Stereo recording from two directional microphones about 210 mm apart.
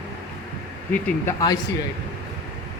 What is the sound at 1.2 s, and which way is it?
Speech, 15° left (ahead or behind).